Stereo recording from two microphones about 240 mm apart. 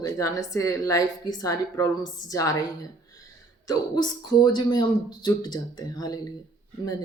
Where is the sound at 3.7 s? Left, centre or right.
Centre.